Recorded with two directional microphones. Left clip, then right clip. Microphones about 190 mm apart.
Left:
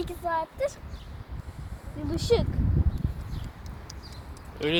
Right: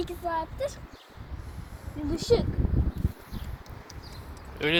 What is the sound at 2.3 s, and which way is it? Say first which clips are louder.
Speech: even; 30° left (ahead or behind).